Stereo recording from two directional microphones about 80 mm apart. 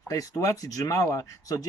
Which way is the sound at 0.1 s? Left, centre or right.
Left.